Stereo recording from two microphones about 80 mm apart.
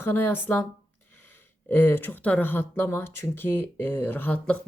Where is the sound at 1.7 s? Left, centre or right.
Left.